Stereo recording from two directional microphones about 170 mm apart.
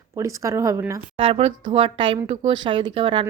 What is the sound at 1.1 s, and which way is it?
A woman's voice, 35° right (ahead or behind).